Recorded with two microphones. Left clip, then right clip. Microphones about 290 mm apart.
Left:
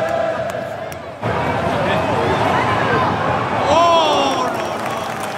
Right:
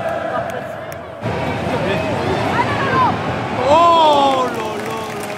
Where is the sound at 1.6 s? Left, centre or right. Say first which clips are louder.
Left 2 dB; centre.